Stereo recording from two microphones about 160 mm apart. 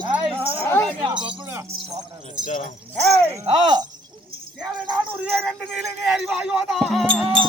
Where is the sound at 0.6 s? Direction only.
15° left (ahead or behind).